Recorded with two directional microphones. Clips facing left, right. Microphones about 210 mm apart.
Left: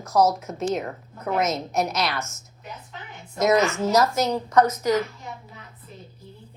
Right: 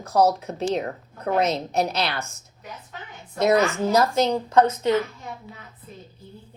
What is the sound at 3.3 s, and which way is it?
Speech, 30° right (ahead or behind).